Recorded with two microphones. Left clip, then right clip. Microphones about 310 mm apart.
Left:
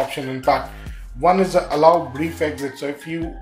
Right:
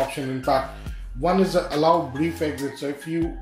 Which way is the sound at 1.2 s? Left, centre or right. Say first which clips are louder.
Left 5 dB; left.